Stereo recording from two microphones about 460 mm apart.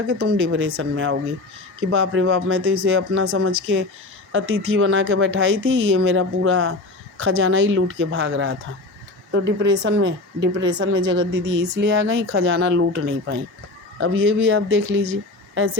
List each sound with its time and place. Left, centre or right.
0.1 s a woman's voice: right